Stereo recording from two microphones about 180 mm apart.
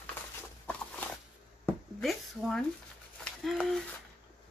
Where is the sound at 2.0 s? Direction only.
Centre (ahead or behind).